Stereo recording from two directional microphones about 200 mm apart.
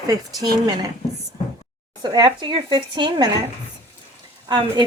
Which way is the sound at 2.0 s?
20° right (ahead or behind).